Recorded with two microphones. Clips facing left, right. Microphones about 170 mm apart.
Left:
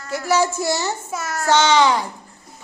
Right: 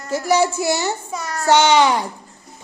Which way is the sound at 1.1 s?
5° left (ahead or behind).